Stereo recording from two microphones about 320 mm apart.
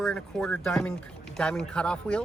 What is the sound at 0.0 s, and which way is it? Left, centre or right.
Speech, centre.